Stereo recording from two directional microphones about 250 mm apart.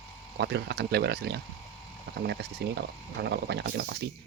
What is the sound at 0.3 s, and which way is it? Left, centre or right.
Speech, right.